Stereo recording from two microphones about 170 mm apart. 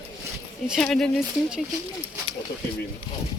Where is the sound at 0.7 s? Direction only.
5° left (ahead or behind).